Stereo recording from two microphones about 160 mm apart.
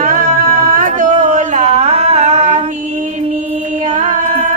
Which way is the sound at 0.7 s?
55° right (ahead or behind).